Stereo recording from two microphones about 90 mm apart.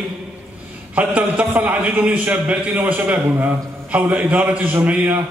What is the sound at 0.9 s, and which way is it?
A man's voice, 20° right (ahead or behind).